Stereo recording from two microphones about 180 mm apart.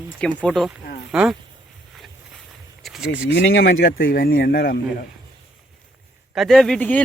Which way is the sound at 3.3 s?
75° left (ahead or behind).